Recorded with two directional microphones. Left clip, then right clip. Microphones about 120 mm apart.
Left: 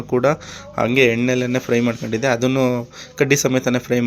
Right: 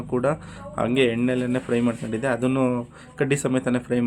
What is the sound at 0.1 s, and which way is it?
A man's voice, 30° left (ahead or behind).